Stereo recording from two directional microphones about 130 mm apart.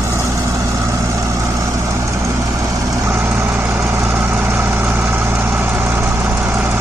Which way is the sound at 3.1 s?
20° right (ahead or behind).